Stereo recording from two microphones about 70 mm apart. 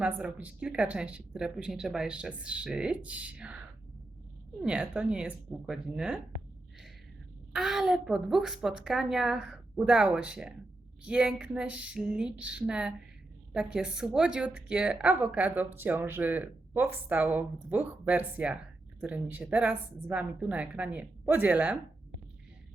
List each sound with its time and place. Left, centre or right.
0.0 s speech: centre
3.0 s speech: centre
7.5 s a woman's voice: centre
11.9 s speech: centre